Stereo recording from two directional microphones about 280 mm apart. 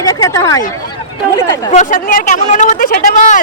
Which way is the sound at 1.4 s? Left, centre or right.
Centre.